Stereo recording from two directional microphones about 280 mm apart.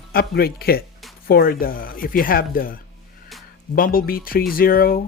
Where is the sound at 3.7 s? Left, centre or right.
Left.